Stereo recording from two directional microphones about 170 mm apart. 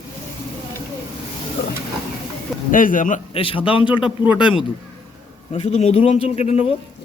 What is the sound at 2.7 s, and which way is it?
Speech, 50° left (ahead or behind).